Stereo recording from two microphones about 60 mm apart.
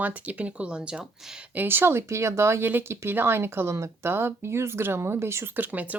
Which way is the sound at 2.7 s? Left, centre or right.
Right.